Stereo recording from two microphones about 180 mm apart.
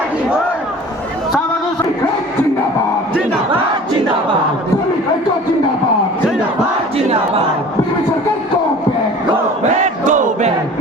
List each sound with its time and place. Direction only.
6.9 s battle cry: 35° right (ahead or behind)
9.8 s crowd: 45° right (ahead or behind)